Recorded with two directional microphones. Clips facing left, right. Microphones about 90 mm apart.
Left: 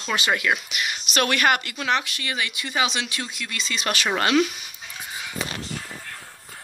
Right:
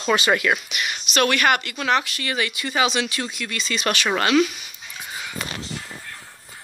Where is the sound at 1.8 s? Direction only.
Centre (ahead or behind).